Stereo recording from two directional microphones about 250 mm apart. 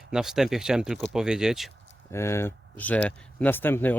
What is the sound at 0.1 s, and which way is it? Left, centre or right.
Speech, centre.